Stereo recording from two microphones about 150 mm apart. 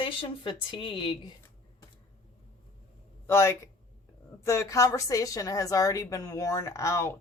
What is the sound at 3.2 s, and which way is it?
A woman's voice, 15° left (ahead or behind).